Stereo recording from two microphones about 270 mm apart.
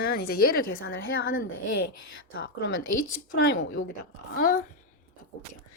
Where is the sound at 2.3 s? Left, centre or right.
Left.